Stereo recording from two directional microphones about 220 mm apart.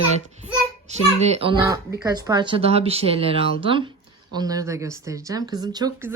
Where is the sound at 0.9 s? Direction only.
30° right (ahead or behind).